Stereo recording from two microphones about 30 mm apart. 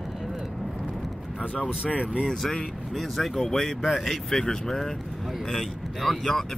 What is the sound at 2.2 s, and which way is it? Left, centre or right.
Speech, centre.